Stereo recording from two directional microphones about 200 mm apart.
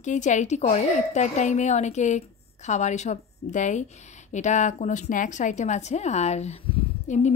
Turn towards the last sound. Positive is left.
turn(degrees=35)  # may be behind; listen again after turning